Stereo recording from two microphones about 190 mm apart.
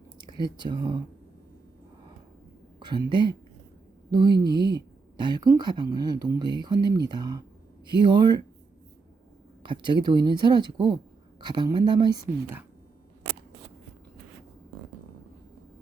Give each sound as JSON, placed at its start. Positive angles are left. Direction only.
{"t": 0.2, "sound": "speech", "side_deg": -25}
{"t": 2.8, "sound": "speech", "side_deg": -25}
{"t": 9.6, "sound": "speech", "side_deg": -25}